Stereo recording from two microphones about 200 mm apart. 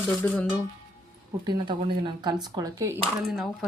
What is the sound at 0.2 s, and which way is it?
Speech, 10° left (ahead or behind).